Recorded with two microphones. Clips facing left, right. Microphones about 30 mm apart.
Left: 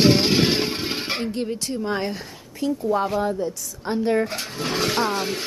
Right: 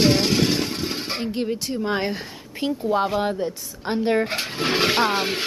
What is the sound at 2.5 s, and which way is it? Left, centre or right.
Speech, right.